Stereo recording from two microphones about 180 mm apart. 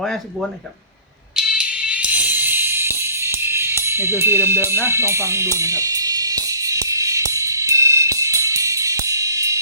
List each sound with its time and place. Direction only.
1.4 s music: 5° right (ahead or behind)